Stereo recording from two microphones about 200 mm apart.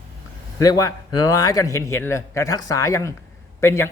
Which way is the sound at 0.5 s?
15° left (ahead or behind).